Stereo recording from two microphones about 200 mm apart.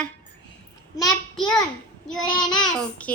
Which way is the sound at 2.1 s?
20° left (ahead or behind).